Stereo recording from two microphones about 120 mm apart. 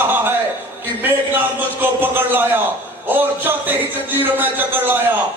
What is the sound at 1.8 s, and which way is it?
A man's voice, 15° right (ahead or behind).